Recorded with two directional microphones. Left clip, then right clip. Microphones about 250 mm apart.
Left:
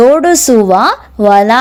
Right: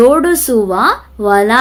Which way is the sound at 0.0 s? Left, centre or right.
Left.